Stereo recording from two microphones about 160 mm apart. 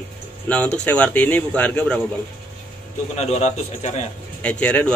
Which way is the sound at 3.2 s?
45° left (ahead or behind).